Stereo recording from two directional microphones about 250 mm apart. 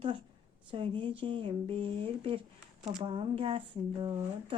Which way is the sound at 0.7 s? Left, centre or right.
Centre.